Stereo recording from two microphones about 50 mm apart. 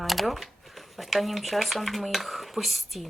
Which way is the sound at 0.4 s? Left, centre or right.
Centre.